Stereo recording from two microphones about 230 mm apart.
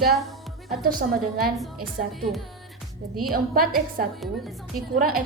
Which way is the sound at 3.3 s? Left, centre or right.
Right.